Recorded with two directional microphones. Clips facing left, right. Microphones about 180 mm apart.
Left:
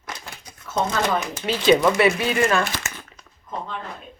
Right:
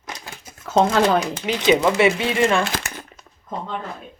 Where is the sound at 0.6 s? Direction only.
85° right.